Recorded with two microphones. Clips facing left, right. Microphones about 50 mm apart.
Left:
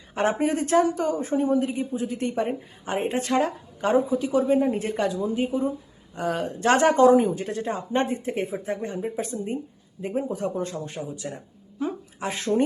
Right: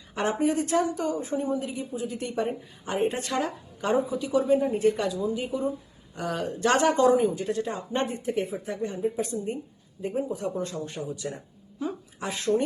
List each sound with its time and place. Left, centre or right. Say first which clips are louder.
0.1 s speech: left 2 dB; left
11.2 s speech: even; centre
11.8 s a sound: left 3 dB; left